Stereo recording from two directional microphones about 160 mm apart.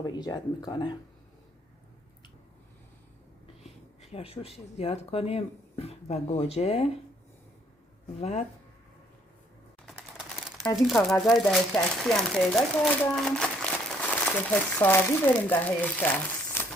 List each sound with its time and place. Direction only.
0.0 s speech: 25° left (ahead or behind)
3.6 s speech: 40° left (ahead or behind)
8.2 s speech: 45° left (ahead or behind)
9.8 s crumpling: centre (ahead or behind)
10.8 s speech: centre (ahead or behind)